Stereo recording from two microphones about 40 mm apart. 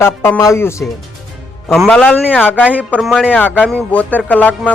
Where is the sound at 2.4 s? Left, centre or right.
Left.